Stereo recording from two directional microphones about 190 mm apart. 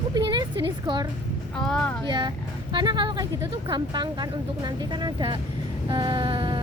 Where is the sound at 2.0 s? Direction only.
25° right (ahead or behind).